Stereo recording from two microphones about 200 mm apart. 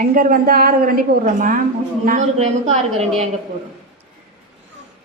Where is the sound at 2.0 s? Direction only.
40° right (ahead or behind).